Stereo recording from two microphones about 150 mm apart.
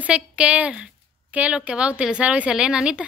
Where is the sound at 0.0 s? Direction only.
10° right (ahead or behind).